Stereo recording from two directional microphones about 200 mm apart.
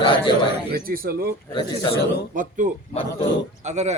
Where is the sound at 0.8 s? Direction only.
45° right (ahead or behind).